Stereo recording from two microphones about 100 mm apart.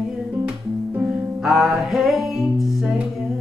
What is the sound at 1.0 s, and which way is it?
Music, 5° right (ahead or behind).